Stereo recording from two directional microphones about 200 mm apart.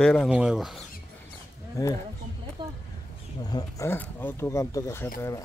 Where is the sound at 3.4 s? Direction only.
20° left (ahead or behind).